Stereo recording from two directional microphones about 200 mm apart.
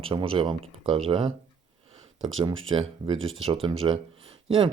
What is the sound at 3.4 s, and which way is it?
Speech, 25° right (ahead or behind).